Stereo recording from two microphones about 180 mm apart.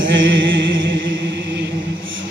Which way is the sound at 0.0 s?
90° right.